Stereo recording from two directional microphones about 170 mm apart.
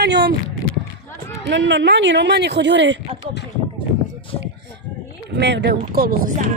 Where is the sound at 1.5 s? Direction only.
90° right.